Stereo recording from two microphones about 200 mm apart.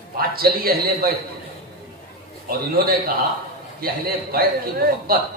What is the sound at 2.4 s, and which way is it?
A man's voice, 50° right (ahead or behind).